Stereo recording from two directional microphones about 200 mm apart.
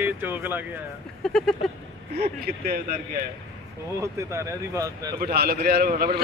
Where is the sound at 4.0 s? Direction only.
15° right (ahead or behind).